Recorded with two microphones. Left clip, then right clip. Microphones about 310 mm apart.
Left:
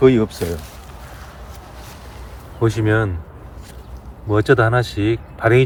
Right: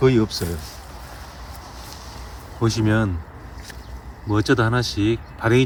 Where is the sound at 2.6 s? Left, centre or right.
Centre.